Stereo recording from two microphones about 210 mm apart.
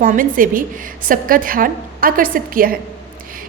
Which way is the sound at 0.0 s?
40° right (ahead or behind).